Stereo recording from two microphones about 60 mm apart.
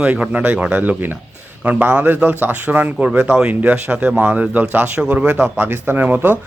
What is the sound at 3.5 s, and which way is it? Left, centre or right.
A man's voice, right.